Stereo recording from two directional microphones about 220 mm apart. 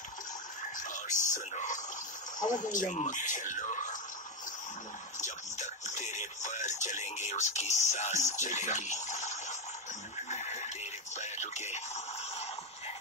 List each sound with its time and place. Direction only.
0.7 s speech: 35° left (ahead or behind)
5.2 s speech: 35° left (ahead or behind)